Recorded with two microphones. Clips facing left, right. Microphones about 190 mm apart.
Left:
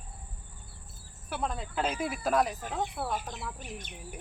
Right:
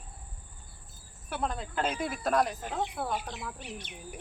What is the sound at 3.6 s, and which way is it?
Speech, 45° left (ahead or behind).